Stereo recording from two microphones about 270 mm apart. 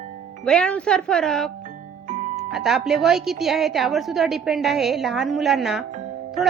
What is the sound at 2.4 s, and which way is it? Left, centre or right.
A woman's voice, centre.